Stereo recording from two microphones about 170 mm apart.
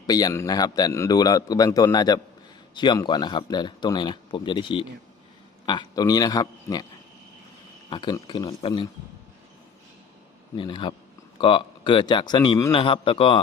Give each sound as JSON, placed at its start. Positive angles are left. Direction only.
{"t": 0.1, "sound": "a man's voice", "side_deg": 20}
{"t": 7.9, "sound": "a man's voice", "side_deg": 25}
{"t": 10.6, "sound": "a man's voice", "side_deg": 30}